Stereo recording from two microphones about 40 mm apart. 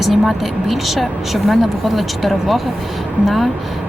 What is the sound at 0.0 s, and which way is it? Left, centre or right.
Speech, centre.